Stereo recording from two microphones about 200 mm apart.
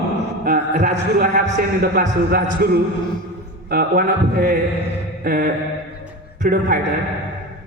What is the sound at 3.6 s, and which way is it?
A man's voice, 50° right (ahead or behind).